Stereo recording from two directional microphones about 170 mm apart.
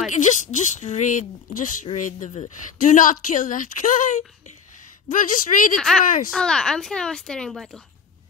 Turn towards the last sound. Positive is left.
turn(degrees=0)  # may be behind; listen again after turning